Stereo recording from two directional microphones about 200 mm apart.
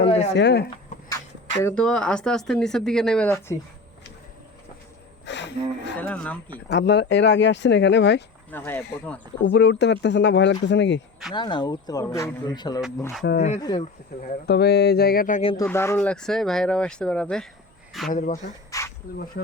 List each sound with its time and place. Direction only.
0.0 s speech: 35° left (ahead or behind)
0.3 s speech: 60° left (ahead or behind)
1.6 s speech: 5° left (ahead or behind)
5.2 s a sound: 60° left (ahead or behind)
6.0 s speech: 5° left (ahead or behind)
6.7 s speech: 60° left (ahead or behind)
8.4 s speech: 10° left (ahead or behind)
9.4 s speech: 65° left (ahead or behind)
11.3 s speech: 20° left (ahead or behind)
14.3 s speech: 50° left (ahead or behind)
15.6 s speech: 10° left (ahead or behind)
18.1 s speech: 40° left (ahead or behind)
18.7 s a sound: 15° left (ahead or behind)